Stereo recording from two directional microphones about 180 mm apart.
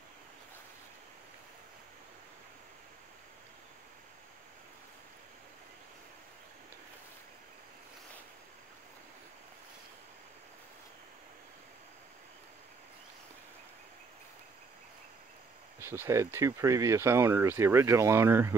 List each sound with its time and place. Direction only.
15.8 s speech: 15° right (ahead or behind)